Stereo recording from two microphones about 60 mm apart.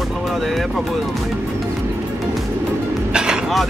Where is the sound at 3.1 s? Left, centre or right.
Centre.